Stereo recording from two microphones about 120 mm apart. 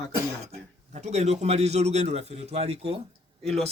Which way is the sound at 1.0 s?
70° right (ahead or behind).